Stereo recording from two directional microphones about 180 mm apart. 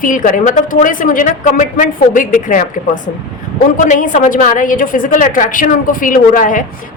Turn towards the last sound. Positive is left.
turn(degrees=50)  # may be behind; listen again after turning